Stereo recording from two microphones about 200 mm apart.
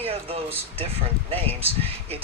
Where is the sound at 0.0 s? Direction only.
30° right (ahead or behind).